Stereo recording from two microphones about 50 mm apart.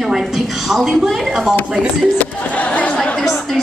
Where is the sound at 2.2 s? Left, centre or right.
Left.